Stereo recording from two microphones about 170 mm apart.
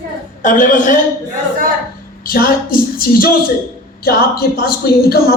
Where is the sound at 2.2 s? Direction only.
60° left (ahead or behind).